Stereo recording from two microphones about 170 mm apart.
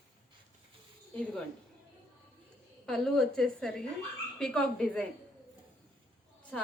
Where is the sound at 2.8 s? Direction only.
5° left (ahead or behind).